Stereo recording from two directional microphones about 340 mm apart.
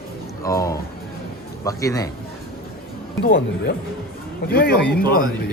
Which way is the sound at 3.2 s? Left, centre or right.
Left.